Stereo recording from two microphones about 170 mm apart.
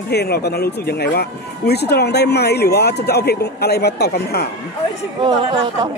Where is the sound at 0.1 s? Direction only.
70° left (ahead or behind).